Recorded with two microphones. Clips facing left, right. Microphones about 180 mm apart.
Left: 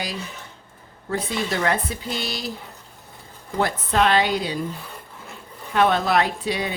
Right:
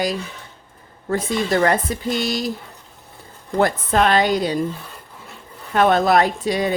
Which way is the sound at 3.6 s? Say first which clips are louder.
Right 3 dB; 45° right (ahead or behind).